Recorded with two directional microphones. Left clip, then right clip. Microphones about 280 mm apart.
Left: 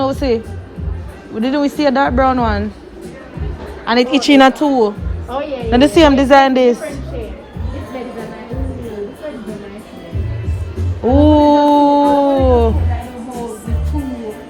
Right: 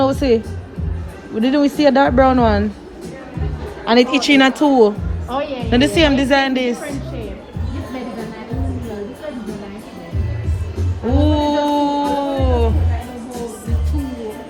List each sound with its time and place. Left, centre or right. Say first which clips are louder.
0.0 s a woman's voice: right 1 dB; centre
3.8 s speech: left 1 dB; centre
5.3 s music: left 1 dB; right
5.7 s a woman's voice: left 5 dB; centre
11.1 s a sound: left 7 dB; centre